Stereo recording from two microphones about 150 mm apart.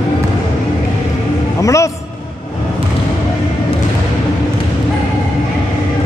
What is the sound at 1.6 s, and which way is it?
Speech, 20° left (ahead or behind).